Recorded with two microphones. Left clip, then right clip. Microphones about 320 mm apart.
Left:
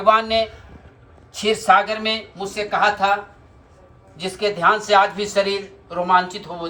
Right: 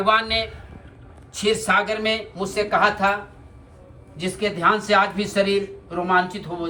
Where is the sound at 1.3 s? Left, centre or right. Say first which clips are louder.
Left 4 dB; centre.